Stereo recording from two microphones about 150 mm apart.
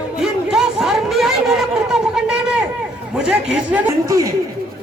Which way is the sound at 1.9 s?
5° right (ahead or behind).